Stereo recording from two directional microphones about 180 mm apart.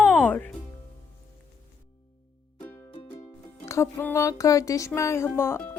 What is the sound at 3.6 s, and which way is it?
Speech, 15° left (ahead or behind).